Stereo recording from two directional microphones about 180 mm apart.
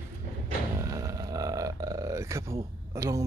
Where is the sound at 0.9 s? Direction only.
20° right (ahead or behind).